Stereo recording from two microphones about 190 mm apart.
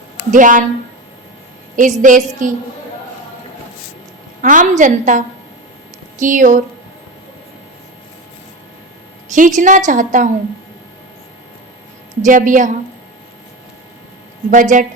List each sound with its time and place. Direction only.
0.3 s a woman's voice: 45° right (ahead or behind)
1.7 s a woman's voice: 45° right (ahead or behind)
4.4 s a woman's voice: 45° right (ahead or behind)
9.3 s a woman's voice: 40° right (ahead or behind)
12.2 s a woman's voice: 45° right (ahead or behind)
14.5 s a woman's voice: 45° right (ahead or behind)